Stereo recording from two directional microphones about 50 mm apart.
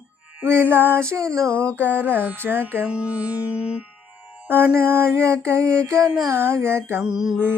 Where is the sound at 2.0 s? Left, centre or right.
Right.